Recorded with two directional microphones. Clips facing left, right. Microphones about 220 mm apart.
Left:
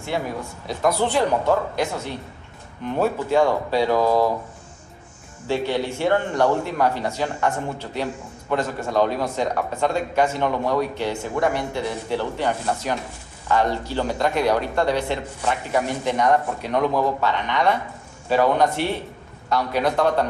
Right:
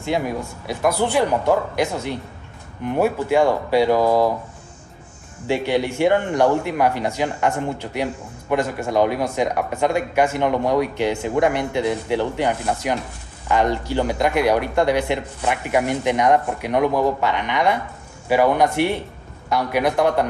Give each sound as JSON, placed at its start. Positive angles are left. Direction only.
{"t": 0.7, "sound": "speech", "side_deg": -10}
{"t": 5.5, "sound": "speech", "side_deg": -15}